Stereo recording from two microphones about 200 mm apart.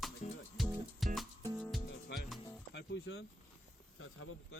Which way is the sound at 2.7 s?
55° left (ahead or behind).